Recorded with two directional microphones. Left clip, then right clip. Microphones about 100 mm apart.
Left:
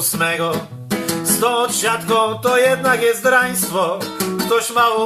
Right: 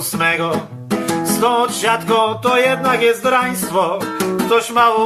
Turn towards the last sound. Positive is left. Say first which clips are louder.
# right 2 dB
turn(degrees=0)  # may be behind; listen again after turning